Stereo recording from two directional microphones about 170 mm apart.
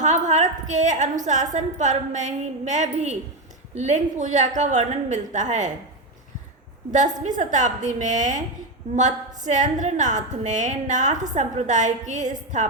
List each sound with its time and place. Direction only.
0.0 s a woman's voice: 45° right (ahead or behind)
6.9 s a woman's voice: 45° right (ahead or behind)